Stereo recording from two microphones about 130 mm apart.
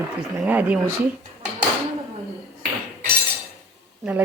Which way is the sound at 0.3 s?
15° right (ahead or behind).